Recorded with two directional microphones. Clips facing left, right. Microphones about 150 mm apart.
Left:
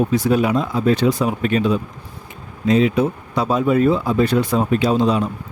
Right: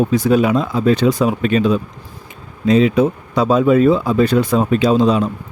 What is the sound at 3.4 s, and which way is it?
Speech, 90° right.